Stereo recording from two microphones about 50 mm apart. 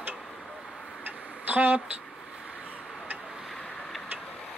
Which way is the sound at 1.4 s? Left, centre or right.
Right.